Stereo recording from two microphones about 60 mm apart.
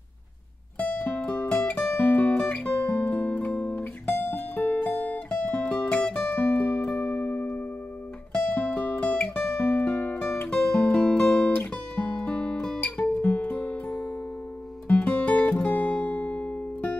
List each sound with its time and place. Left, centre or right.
0.7 s music: left
3.5 s guitar: centre
3.8 s music: left
6.2 s music: left
10.5 s music: centre
11.7 s guitar: centre
12.8 s guitar: left
14.9 s music: left